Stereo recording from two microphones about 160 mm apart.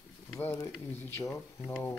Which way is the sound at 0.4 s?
15° left (ahead or behind).